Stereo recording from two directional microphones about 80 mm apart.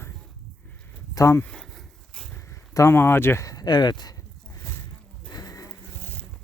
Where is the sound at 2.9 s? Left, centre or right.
Left.